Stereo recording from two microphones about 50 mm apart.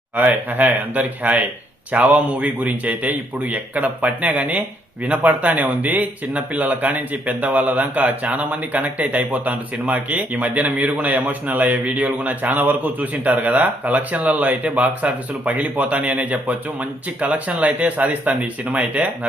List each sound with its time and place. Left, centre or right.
0.2 s speech: right